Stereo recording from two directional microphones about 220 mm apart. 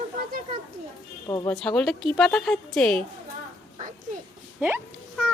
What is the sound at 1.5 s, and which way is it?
Speech, 5° left (ahead or behind).